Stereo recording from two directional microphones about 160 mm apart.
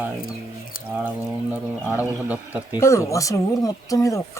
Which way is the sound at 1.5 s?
10° right (ahead or behind).